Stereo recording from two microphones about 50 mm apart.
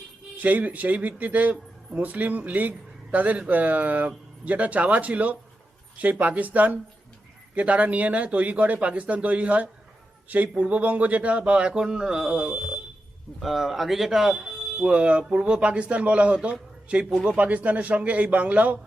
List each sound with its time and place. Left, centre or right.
0.4 s speech: right